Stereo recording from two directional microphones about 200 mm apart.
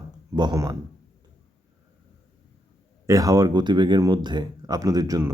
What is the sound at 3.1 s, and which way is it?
Speech, 15° right (ahead or behind).